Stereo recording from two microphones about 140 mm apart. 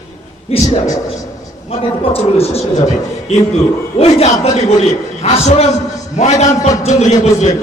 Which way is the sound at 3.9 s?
50° left (ahead or behind).